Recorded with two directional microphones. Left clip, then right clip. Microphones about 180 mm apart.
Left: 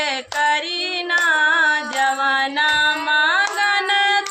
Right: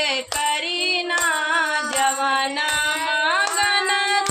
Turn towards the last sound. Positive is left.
turn(degrees=20)  # may be behind; listen again after turning